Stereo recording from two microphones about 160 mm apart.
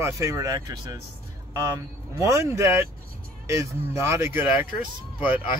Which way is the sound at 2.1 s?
20° right (ahead or behind).